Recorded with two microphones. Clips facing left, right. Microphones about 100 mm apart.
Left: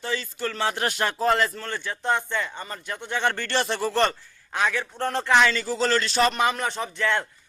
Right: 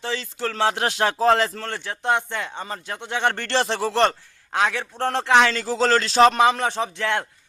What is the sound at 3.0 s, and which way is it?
A man's voice, 65° right (ahead or behind).